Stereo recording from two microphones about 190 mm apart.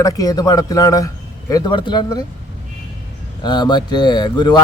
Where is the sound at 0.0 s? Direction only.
20° left (ahead or behind).